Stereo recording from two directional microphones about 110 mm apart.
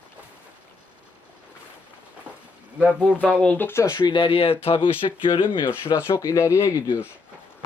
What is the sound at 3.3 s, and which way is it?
Speech, 10° left (ahead or behind).